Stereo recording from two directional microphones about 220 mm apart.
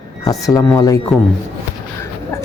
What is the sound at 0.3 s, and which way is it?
Speech, 15° left (ahead or behind).